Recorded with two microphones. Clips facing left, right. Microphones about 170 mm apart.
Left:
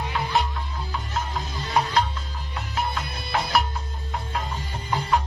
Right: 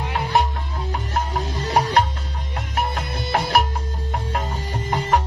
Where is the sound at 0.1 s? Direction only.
50° right (ahead or behind).